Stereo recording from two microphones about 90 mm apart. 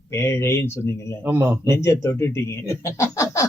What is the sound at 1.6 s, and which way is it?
Speech, 30° left (ahead or behind).